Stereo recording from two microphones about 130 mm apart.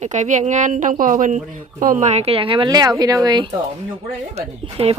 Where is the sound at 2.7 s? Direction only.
30° right (ahead or behind).